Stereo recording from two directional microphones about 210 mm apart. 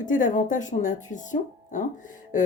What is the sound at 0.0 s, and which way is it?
A woman's voice, 40° left (ahead or behind).